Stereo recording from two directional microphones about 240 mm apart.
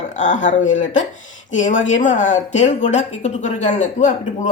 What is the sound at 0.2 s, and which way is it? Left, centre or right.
A woman's voice, left.